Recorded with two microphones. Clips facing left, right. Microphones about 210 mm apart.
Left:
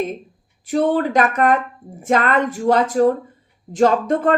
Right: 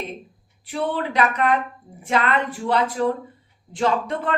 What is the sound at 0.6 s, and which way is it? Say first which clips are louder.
A woman's voice: left 8 dB; 45° left (ahead or behind).